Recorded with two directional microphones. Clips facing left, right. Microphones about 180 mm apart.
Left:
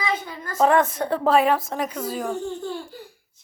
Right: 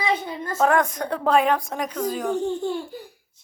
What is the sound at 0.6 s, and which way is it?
Speech, centre (ahead or behind).